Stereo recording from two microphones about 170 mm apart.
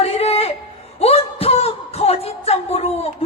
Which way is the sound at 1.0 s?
35° left (ahead or behind).